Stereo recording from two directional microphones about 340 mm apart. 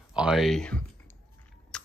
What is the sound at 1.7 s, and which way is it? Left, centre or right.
Biting, centre.